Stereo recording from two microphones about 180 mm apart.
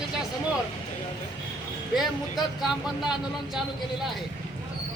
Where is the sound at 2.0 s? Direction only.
Centre (ahead or behind).